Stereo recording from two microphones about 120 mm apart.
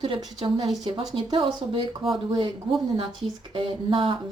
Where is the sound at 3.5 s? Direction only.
50° right (ahead or behind).